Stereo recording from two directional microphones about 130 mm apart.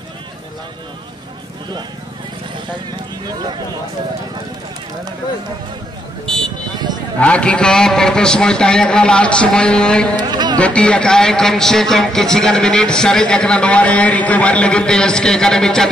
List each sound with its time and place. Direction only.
7.2 s a man's voice: 10° left (ahead or behind)
10.1 s a sound: 35° right (ahead or behind)
10.6 s speech: 10° left (ahead or behind)